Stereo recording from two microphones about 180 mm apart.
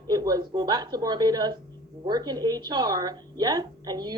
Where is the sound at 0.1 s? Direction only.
20° right (ahead or behind).